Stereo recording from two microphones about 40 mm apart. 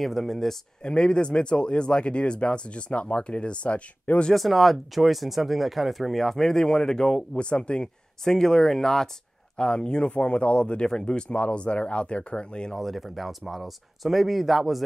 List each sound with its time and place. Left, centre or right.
0.0 s speech: centre
0.8 s speech: left
4.3 s speech: centre; by 7.9 s left
8.2 s speech: centre
9.6 s speech: left
11.2 s speech: left
12.7 s speech: centre